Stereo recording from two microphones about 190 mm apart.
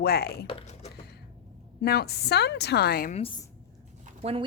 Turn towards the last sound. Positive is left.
turn(degrees=-30)  # may be behind; listen again after turning